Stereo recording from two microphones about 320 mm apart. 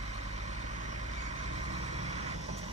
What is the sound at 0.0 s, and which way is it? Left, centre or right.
Vehicle, right.